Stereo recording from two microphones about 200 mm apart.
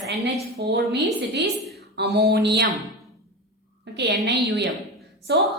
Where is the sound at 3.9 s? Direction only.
60° right (ahead or behind).